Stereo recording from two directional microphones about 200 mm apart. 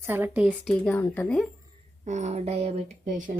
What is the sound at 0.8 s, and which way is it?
Speech, 10° left (ahead or behind).